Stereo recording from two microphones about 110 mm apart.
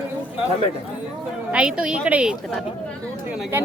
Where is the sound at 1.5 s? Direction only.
10° right (ahead or behind).